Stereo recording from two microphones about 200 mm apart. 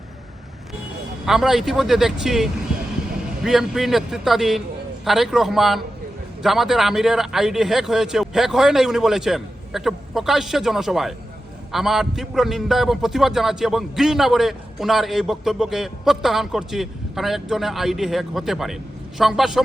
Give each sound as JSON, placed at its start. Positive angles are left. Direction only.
{"t": 1.2, "sound": "a man's voice", "side_deg": 0}